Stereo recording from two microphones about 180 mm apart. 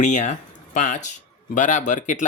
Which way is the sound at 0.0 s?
40° left (ahead or behind).